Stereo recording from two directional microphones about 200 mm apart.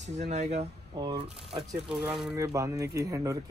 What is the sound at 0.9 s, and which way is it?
Speech, 20° right (ahead or behind).